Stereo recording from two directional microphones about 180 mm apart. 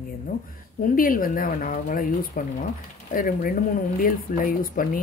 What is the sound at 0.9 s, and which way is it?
Speech, 50° left (ahead or behind).